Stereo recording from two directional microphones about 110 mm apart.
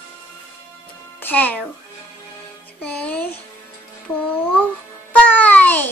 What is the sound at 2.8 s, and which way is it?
Music, 10° left (ahead or behind).